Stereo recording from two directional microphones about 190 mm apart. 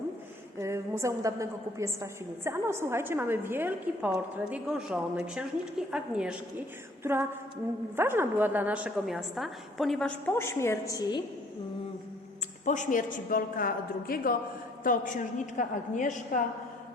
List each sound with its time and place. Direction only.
0.6 s a woman's voice: 15° right (ahead or behind)
7.0 s a sound: 15° right (ahead or behind)
7.9 s a woman's voice: 10° right (ahead or behind); by 11.2 s 20° left (ahead or behind)
12.6 s a woman's voice: 40° left (ahead or behind)